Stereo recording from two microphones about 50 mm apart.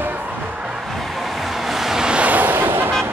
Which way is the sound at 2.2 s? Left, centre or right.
Right.